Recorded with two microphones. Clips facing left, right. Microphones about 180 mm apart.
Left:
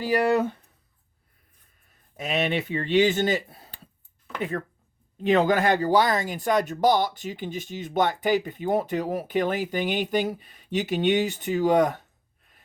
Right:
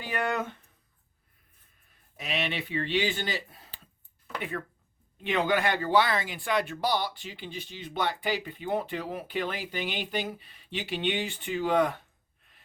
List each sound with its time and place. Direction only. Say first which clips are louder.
0.0 s speech: left 9 dB; 35° left (ahead or behind)
2.1 s speech: left 7 dB; 45° left (ahead or behind)
5.2 s speech: left 6 dB; 40° left (ahead or behind)